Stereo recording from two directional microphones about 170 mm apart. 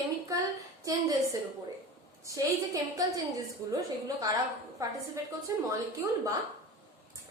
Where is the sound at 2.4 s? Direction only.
20° right (ahead or behind).